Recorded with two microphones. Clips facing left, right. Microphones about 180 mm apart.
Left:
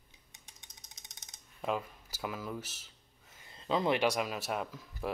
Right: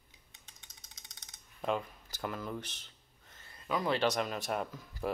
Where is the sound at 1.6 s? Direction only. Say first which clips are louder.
Right 1 dB; 5° left (ahead or behind).